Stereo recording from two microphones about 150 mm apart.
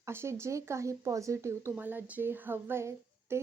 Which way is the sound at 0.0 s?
15° right (ahead or behind).